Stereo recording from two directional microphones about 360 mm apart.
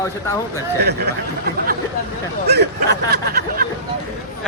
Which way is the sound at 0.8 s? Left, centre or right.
Right.